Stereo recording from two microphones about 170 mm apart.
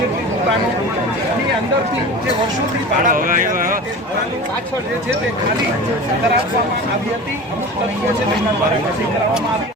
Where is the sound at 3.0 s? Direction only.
55° right (ahead or behind).